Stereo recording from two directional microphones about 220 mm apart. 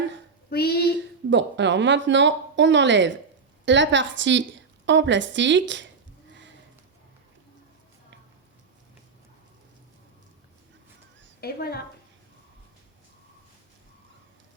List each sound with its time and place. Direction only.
0.5 s speech: 45° left (ahead or behind)
1.3 s speech: 55° right (ahead or behind)
11.3 s a woman's voice: 45° left (ahead or behind)